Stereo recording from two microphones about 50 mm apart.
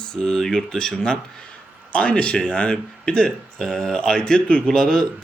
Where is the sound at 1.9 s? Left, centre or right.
Left.